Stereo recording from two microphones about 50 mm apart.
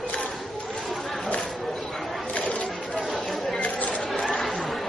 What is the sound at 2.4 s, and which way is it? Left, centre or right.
Chatter, left.